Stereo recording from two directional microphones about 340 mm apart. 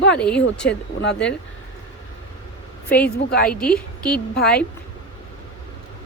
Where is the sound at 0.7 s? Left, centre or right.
Left.